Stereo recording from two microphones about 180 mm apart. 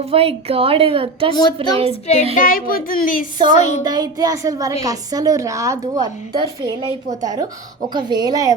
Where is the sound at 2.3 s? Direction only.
50° left (ahead or behind).